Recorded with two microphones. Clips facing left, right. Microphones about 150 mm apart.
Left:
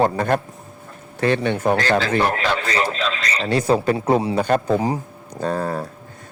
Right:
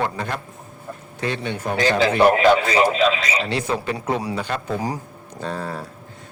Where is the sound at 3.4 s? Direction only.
40° left (ahead or behind).